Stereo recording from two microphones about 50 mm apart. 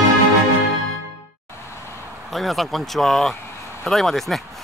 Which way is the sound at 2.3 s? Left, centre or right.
Centre.